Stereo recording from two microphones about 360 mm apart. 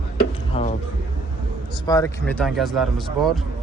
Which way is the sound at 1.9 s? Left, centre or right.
Centre.